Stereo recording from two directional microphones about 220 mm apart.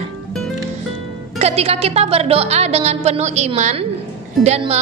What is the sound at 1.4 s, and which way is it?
Music, 25° right (ahead or behind).